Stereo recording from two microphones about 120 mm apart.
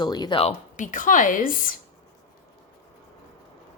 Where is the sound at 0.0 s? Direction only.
40° left (ahead or behind).